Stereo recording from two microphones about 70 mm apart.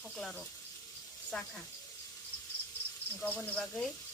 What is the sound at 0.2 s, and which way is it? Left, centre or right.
Speech, centre.